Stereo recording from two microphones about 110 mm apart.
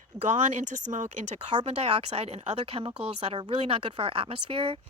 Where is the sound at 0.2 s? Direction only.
90° right.